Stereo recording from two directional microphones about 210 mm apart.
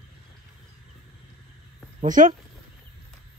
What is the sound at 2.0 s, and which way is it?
Speech, 40° right (ahead or behind).